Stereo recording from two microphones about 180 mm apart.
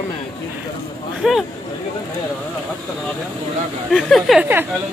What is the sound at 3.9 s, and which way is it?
Speech, centre (ahead or behind).